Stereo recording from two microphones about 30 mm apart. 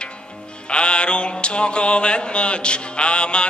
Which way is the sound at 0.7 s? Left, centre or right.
Left.